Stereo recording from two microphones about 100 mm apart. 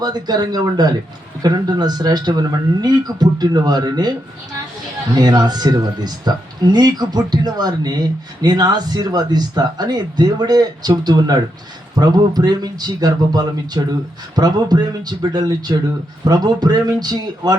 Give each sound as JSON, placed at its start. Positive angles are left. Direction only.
{"t": 0.0, "sound": "speech", "side_deg": -45}
{"t": 5.1, "sound": "speech", "side_deg": -45}